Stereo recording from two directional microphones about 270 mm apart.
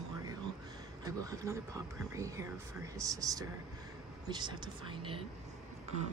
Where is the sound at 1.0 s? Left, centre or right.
Centre.